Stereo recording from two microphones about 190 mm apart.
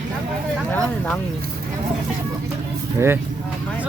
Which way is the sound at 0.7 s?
5° left (ahead or behind).